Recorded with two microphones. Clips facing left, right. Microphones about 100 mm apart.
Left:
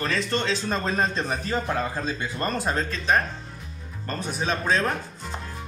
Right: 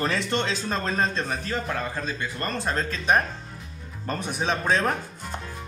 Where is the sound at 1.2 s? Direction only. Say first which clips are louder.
Left 2 dB; 20° left (ahead or behind).